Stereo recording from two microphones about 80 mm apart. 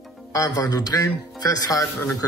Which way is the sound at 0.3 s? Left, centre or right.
Left.